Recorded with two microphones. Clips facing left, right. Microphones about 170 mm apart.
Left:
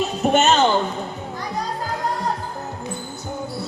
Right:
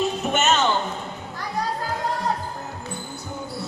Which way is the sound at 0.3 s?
35° left (ahead or behind).